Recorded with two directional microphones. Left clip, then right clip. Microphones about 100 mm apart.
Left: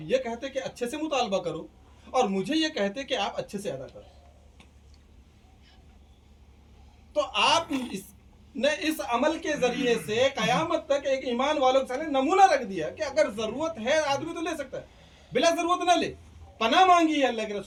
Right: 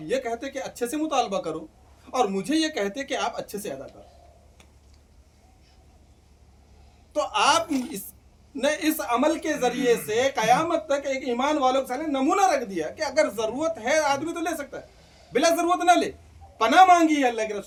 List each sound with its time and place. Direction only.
0.1 s speech: 35° right (ahead or behind)
7.1 s speech: 35° right (ahead or behind)